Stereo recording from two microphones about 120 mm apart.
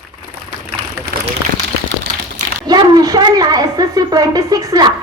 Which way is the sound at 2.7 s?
35° right (ahead or behind).